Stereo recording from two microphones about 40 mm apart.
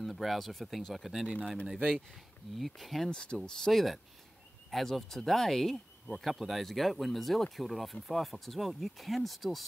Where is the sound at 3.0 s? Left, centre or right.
Left.